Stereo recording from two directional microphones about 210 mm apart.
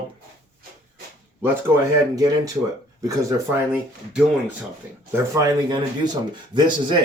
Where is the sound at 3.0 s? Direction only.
15° right (ahead or behind).